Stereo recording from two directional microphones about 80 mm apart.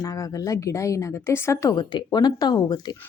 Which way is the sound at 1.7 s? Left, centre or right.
Left.